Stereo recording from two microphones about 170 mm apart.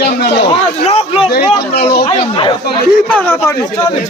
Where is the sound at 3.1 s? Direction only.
15° left (ahead or behind).